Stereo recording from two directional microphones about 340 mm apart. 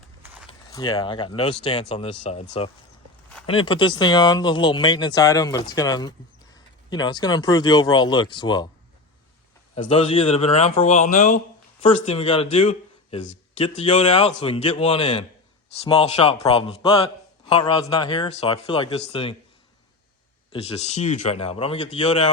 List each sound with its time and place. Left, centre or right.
0.4 s speech: centre
9.9 s a man's voice: centre
20.5 s speech: centre